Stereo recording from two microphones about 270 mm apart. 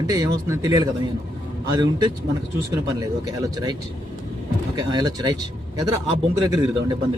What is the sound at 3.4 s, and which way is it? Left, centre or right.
Speech, centre.